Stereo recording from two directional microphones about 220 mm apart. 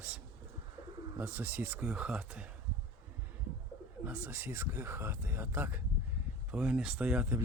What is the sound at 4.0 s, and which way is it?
Speech, 10° right (ahead or behind).